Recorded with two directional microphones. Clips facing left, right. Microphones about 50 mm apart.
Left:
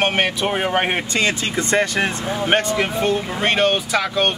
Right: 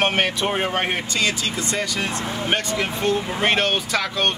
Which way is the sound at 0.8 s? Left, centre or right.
Left.